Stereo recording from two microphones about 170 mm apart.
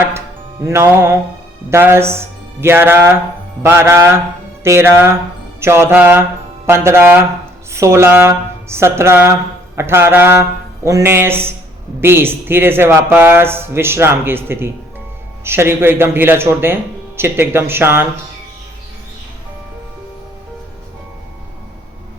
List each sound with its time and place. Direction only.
0.6 s speech: 15° right (ahead or behind)